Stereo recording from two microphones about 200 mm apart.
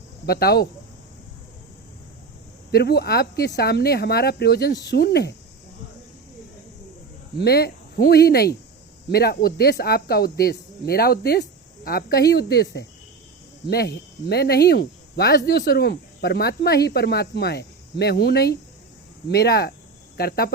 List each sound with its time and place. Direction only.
0.3 s speech: 50° left (ahead or behind)
2.7 s speech: 55° left (ahead or behind)
7.3 s a woman's voice: 50° left (ahead or behind)